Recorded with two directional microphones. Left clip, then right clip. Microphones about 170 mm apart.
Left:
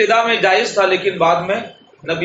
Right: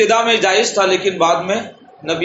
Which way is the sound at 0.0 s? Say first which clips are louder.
Even; 45° right (ahead or behind).